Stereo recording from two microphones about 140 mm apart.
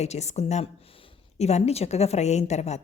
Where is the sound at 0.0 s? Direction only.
50° left (ahead or behind).